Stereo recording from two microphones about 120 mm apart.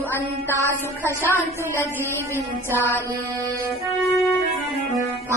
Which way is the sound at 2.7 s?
15° left (ahead or behind).